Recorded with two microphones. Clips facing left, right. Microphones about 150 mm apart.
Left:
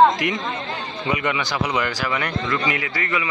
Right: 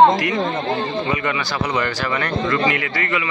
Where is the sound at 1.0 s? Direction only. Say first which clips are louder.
Right 1 dB; 15° left (ahead or behind).